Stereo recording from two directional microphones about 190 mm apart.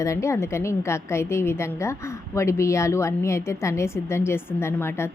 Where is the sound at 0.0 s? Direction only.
15° left (ahead or behind).